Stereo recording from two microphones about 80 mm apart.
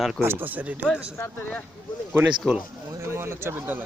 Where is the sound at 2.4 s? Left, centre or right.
Centre.